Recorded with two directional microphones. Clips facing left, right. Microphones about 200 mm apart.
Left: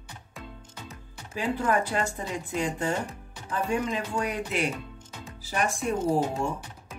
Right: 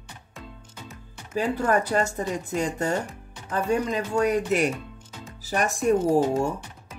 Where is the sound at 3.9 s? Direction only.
45° right (ahead or behind).